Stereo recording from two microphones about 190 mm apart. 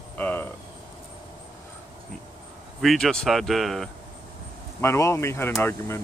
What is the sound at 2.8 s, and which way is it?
Speech, centre (ahead or behind).